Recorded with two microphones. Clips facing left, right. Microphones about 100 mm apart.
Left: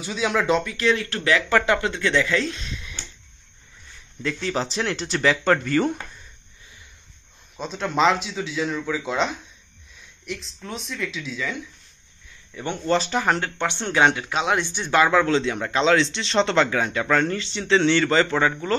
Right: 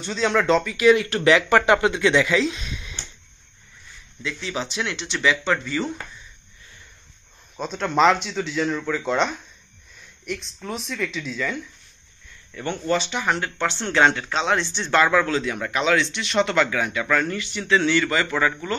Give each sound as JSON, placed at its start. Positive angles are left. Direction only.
{"t": 0.0, "sound": "speech", "side_deg": 10}
{"t": 0.8, "sound": "speech", "side_deg": -20}
{"t": 2.4, "sound": "speech", "side_deg": -5}
{"t": 4.2, "sound": "speech", "side_deg": 45}
{"t": 7.5, "sound": "speech", "side_deg": 0}
{"t": 12.8, "sound": "speech", "side_deg": 40}
{"t": 13.6, "sound": "speech", "side_deg": 20}